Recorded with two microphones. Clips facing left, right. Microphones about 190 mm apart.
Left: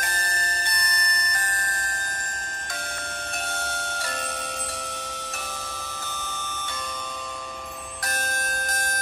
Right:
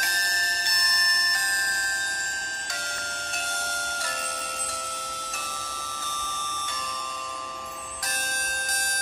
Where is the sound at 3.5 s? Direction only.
65° left (ahead or behind).